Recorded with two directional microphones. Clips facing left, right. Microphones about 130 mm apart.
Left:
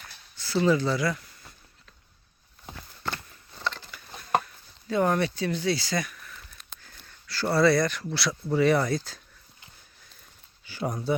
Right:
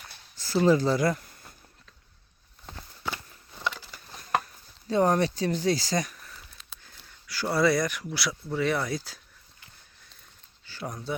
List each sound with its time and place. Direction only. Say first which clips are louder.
0.3 s a sound: right 1 dB; 40° right (ahead or behind)
3.0 s a sound: even; 10° right (ahead or behind)
4.4 s speech: right 1 dB; 35° right (ahead or behind)
6.3 s sniff: left 1 dB; centre (ahead or behind)
6.9 s a sound: left 1 dB; 10° right (ahead or behind)
7.5 s speech: left 2 dB; 15° right (ahead or behind)
8.4 s speech: left 6 dB; centre (ahead or behind)
8.9 s speech: left 4 dB; 10° right (ahead or behind)
10.7 s speech: left 6 dB; 10° left (ahead or behind)